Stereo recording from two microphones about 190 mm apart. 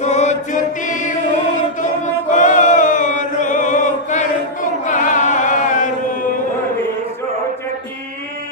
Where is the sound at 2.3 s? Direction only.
40° left (ahead or behind).